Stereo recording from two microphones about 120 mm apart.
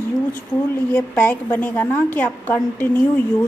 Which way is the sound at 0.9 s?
15° left (ahead or behind).